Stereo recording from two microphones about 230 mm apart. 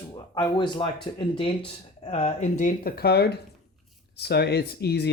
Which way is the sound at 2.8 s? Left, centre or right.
Left.